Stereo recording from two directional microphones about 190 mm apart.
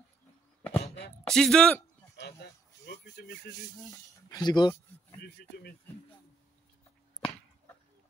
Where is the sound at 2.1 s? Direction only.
60° left (ahead or behind).